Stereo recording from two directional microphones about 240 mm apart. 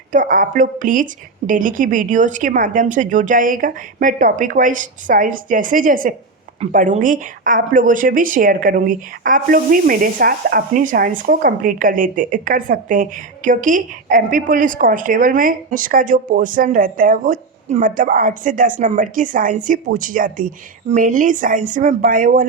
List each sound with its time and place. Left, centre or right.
0.1 s a woman's voice: right